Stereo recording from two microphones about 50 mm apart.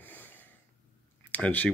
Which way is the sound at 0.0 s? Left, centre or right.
Left.